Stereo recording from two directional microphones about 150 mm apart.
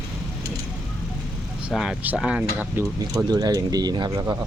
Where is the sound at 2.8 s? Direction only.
25° right (ahead or behind).